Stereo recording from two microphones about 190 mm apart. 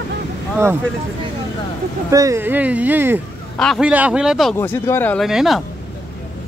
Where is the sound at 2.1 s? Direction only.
15° right (ahead or behind).